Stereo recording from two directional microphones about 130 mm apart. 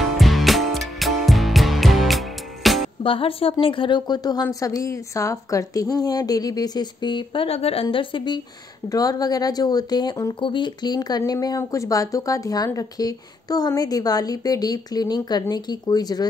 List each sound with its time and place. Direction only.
0.0 s music: centre (ahead or behind)
3.0 s speech: 45° left (ahead or behind)
8.8 s speech: 30° left (ahead or behind)